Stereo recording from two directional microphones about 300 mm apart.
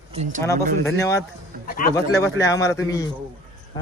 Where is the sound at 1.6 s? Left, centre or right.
Left.